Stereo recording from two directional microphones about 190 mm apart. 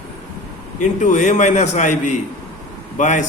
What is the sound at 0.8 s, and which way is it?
A man's voice, 40° left (ahead or behind).